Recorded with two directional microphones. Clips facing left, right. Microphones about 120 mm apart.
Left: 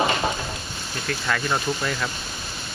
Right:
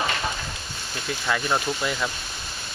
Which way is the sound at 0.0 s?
25° left (ahead or behind).